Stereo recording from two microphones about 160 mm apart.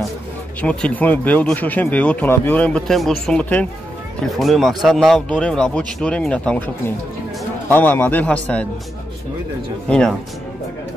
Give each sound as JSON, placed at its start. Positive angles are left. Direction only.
{"t": 0.6, "sound": "speech", "side_deg": 5}
{"t": 7.7, "sound": "speech", "side_deg": 10}
{"t": 9.8, "sound": "speech", "side_deg": 5}